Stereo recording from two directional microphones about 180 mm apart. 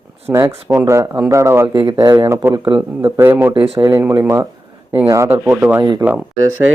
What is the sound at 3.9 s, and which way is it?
Speech, 15° right (ahead or behind).